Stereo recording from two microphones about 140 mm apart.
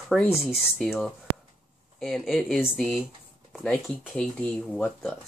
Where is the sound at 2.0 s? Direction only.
5° left (ahead or behind).